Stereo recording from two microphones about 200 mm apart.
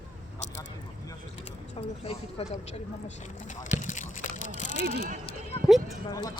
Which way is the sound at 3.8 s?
40° left (ahead or behind).